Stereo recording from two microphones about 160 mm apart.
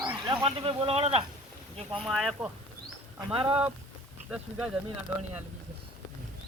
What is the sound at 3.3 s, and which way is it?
Speech, 35° right (ahead or behind).